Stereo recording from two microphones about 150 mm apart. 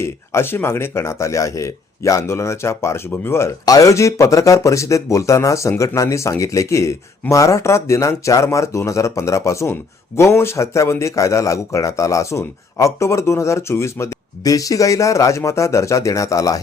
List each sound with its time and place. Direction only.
0.0 s speech: 15° left (ahead or behind)